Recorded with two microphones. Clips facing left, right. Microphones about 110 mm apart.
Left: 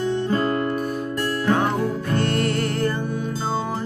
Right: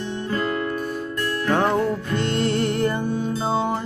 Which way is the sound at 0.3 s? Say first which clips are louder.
Left 3 dB; 30° left (ahead or behind).